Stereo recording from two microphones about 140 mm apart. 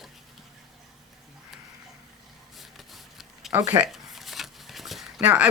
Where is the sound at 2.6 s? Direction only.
Centre (ahead or behind).